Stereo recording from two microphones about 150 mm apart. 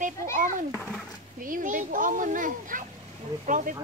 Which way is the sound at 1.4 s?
65° right (ahead or behind).